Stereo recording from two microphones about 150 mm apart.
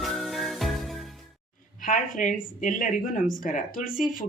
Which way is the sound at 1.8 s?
60° left (ahead or behind).